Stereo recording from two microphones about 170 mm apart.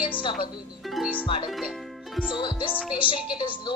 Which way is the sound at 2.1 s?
5° right (ahead or behind).